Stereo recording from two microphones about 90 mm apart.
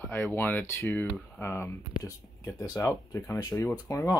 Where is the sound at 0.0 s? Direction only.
20° left (ahead or behind).